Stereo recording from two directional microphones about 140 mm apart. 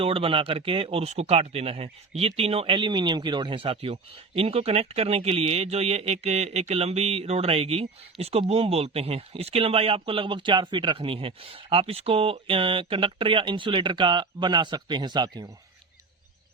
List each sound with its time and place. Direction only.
0.0 s speech: 40° right (ahead or behind)